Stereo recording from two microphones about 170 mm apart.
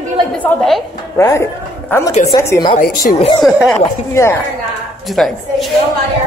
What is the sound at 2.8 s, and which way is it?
Speech, 50° left (ahead or behind).